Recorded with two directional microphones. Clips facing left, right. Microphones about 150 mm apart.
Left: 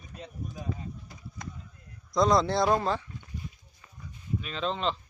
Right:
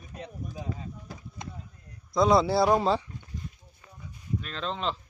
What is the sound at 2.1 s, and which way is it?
Speech, 5° right (ahead or behind).